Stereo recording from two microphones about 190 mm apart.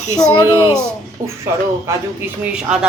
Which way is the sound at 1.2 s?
45° right (ahead or behind).